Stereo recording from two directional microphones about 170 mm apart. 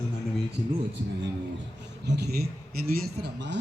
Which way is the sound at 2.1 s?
75° right (ahead or behind).